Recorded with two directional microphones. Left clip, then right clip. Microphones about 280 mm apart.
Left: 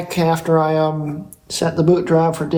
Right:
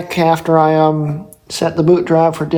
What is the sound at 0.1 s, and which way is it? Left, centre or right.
Speech, right.